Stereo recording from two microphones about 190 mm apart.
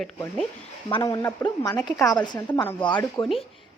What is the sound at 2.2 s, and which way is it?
A woman's voice, 25° left (ahead or behind).